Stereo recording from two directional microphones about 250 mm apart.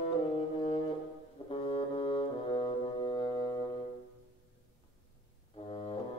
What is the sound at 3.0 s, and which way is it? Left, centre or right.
Music, centre.